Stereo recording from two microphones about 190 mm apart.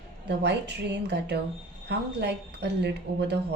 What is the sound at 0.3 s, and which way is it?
A woman's voice, 65° right (ahead or behind).